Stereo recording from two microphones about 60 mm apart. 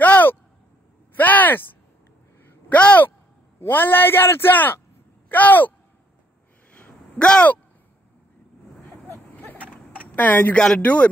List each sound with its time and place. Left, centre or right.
0.0 s a sound: left
2.7 s speech: left
3.5 s a man's voice: left
6.7 s a sound: centre
9.4 s vehicle: left
10.1 s speech: left
10.5 s speech: centre
10.8 s speech: left